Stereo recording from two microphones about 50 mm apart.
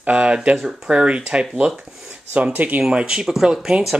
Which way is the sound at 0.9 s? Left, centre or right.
Right.